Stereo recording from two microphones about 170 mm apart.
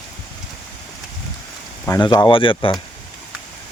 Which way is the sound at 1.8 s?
20° left (ahead or behind).